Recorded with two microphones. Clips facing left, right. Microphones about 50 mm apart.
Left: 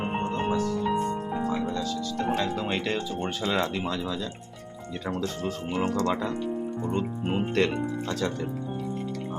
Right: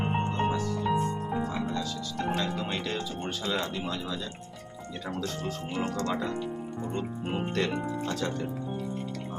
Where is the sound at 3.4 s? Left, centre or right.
Left.